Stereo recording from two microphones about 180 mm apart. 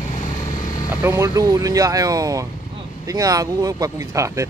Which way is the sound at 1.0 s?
15° right (ahead or behind).